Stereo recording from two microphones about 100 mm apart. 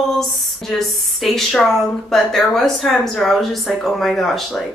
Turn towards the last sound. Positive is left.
turn(degrees=5)  # may be behind; listen again after turning